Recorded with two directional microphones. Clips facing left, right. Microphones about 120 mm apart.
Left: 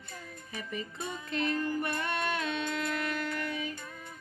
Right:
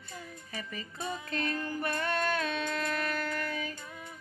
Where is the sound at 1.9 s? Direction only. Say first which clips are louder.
Right 2 dB; 15° left (ahead or behind).